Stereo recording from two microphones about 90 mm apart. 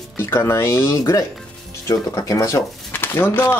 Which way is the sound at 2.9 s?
25° left (ahead or behind).